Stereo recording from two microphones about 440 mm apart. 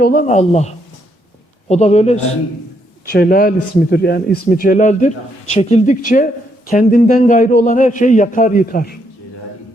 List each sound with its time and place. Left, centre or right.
0.0 s a man's voice: centre
1.7 s a man's voice: centre